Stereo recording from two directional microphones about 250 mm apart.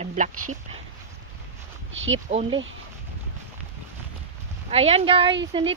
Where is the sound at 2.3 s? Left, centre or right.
Right.